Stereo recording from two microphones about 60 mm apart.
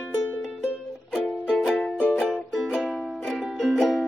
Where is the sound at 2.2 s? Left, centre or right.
Centre.